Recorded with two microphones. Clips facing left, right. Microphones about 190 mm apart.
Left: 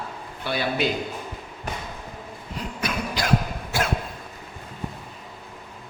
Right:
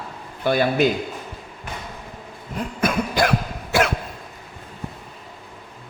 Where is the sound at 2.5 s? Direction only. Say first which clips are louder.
Right 7 dB; 50° right (ahead or behind).